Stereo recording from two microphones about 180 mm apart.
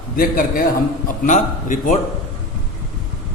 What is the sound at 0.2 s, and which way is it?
A man's voice, 50° left (ahead or behind).